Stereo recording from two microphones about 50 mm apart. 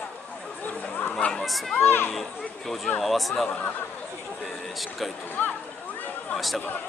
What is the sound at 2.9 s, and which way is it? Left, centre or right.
Speech, centre.